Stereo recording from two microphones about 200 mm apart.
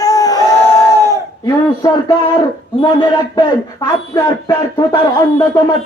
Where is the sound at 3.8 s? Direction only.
20° left (ahead or behind).